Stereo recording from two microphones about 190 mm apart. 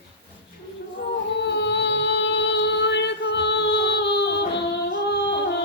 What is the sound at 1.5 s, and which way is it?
Music, 65° left (ahead or behind).